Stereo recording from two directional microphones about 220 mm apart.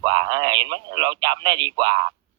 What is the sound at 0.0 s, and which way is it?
Speech, 20° right (ahead or behind).